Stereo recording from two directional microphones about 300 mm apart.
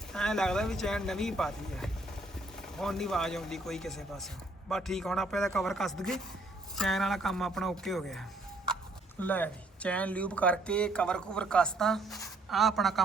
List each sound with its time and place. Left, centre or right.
0.1 s speech: centre
9.2 s speech: centre